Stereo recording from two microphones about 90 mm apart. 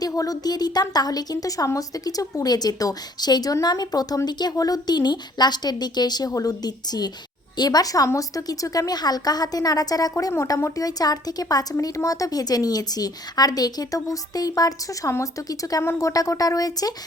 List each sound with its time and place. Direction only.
0.0 s a woman's voice: 40° left (ahead or behind)